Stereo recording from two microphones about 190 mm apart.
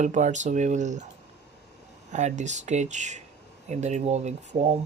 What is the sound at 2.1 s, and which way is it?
Speech, 40° right (ahead or behind).